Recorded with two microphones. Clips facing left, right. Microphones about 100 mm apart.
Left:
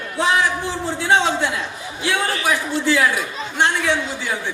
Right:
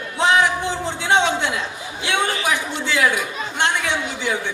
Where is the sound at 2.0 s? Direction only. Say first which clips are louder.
Even; 20° right (ahead or behind).